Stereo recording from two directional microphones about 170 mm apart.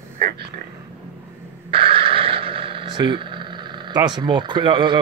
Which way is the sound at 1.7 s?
30° right (ahead or behind).